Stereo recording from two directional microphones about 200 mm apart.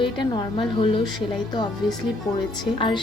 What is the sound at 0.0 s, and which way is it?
Speech, 25° left (ahead or behind).